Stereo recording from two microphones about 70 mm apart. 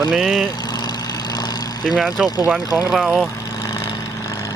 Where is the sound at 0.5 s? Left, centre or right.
Left.